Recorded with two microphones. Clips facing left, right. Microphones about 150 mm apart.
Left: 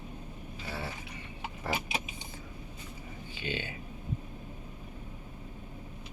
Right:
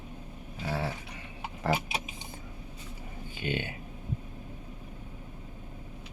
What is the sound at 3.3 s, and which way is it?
Speech, 50° right (ahead or behind).